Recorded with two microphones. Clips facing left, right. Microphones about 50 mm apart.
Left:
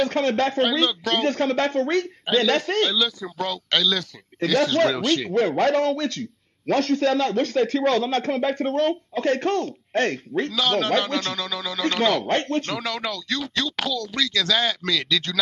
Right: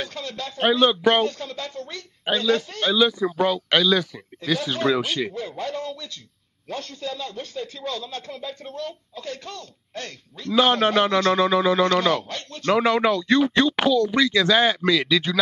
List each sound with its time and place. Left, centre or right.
0.0 s speech: left
0.8 s speech: right
1.2 s a man's voice: left
2.8 s speech: centre
4.4 s a man's voice: left
4.9 s speech: centre
5.3 s a man's voice: left
10.5 s speech: right
12.2 s speech: left
12.6 s speech: right